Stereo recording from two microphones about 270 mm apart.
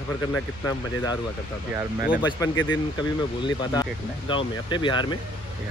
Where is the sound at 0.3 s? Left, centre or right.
Centre.